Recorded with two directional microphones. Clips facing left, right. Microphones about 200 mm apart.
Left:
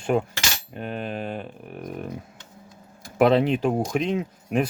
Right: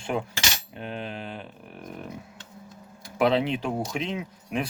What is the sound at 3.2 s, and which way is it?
Speech, 50° left (ahead or behind).